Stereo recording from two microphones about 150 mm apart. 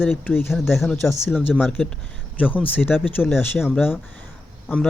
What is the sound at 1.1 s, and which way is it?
Speech, 15° left (ahead or behind).